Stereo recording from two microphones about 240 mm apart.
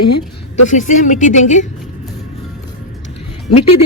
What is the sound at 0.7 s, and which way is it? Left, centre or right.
Speech, left.